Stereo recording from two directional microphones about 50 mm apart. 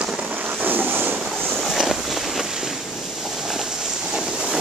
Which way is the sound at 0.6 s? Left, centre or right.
Right.